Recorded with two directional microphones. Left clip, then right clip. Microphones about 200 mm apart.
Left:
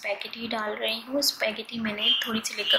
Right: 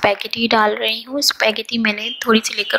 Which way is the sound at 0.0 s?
45° right (ahead or behind).